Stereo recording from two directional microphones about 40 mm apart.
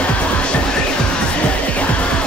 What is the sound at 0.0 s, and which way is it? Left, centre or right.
Music, left.